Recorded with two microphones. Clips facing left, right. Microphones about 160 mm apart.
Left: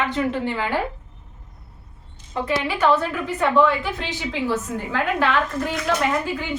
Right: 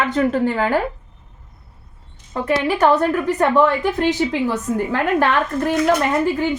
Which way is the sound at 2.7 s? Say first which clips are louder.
Right 5 dB; 45° right (ahead or behind).